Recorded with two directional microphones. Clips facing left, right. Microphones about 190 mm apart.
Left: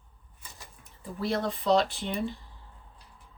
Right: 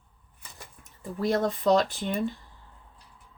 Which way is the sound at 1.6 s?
45° right (ahead or behind).